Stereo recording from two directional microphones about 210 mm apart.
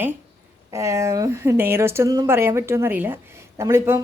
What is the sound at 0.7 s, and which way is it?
Speech, 15° right (ahead or behind).